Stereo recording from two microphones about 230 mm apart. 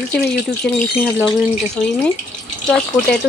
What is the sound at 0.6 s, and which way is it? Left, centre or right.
Speech, centre.